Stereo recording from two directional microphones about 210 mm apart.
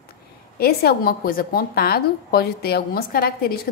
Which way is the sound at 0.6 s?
50° left (ahead or behind).